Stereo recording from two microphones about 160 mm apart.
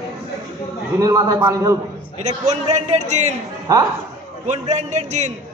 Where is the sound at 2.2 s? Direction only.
45° right (ahead or behind).